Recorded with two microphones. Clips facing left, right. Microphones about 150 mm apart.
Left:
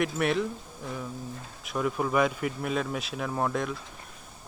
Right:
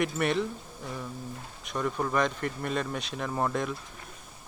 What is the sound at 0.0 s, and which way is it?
Speech, centre (ahead or behind).